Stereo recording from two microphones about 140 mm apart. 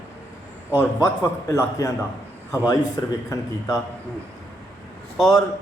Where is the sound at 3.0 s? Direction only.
30° left (ahead or behind).